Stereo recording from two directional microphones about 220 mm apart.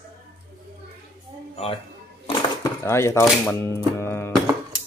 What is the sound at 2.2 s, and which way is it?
Dishes, 15° left (ahead or behind).